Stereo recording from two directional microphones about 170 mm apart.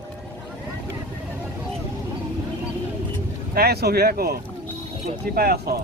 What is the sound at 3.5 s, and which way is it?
Speech, 70° right (ahead or behind).